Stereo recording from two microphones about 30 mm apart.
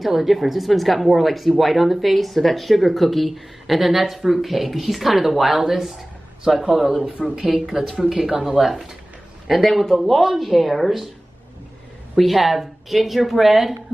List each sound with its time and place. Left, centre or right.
0.0 s speech: centre
8.5 s speech: centre
9.7 s a man's voice: centre
12.2 s speech: centre